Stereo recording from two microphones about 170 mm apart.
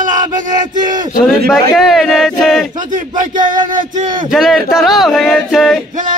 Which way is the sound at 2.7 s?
50° right (ahead or behind).